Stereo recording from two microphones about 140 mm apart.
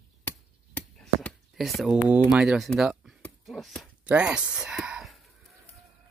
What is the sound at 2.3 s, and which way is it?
Speech, 5° right (ahead or behind).